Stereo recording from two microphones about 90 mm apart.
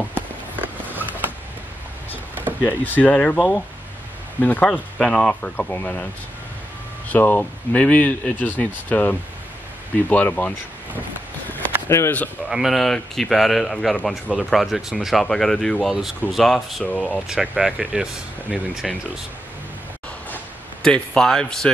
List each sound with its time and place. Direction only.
0.1 s a sound: 20° right (ahead or behind)
2.6 s speech: 20° left (ahead or behind)
4.4 s speech: 20° left (ahead or behind)
7.1 s speech: 20° left (ahead or behind)
11.9 s speech: 30° left (ahead or behind)
12.4 s speech: 5° right (ahead or behind); by 17.2 s 10° left (ahead or behind)
17.3 s speech: 5° right (ahead or behind)
20.8 s speech: 10° left (ahead or behind)